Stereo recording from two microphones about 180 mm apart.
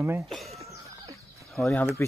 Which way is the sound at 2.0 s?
15° left (ahead or behind).